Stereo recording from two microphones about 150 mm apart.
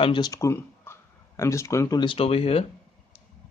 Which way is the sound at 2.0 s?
35° left (ahead or behind).